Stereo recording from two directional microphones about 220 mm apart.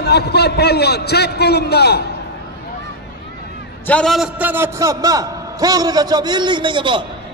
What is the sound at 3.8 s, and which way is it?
A man's voice, 5° left (ahead or behind).